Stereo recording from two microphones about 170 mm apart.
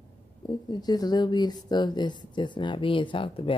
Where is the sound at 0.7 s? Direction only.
25° left (ahead or behind).